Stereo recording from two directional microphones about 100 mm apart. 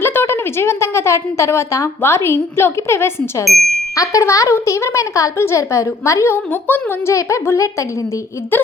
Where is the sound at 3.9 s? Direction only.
35° left (ahead or behind).